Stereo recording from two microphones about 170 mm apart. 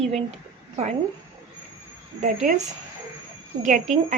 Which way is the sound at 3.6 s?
50° right (ahead or behind).